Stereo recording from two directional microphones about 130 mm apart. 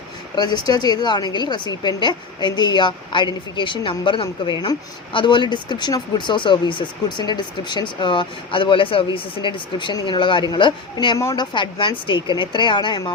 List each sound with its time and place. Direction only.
0.3 s a woman's voice: 35° left (ahead or behind)
11.2 s speech: 25° left (ahead or behind)
11.5 s a woman's voice: 40° left (ahead or behind)